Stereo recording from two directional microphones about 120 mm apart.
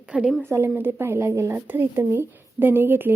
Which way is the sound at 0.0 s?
5° right (ahead or behind).